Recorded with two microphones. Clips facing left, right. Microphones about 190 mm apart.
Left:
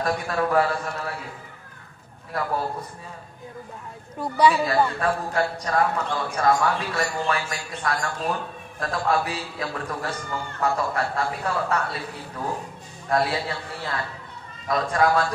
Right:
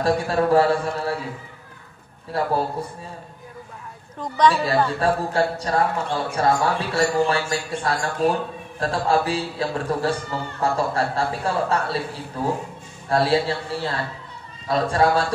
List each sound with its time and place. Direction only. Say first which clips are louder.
0.0 s a man's voice: right 5 dB; 30° right (ahead or behind)
2.3 s a man's voice: right 4 dB; 30° right (ahead or behind)
4.2 s a woman's voice: right 1 dB; 10° left (ahead or behind)
5.0 s a man's voice: right 3 dB; 30° right (ahead or behind)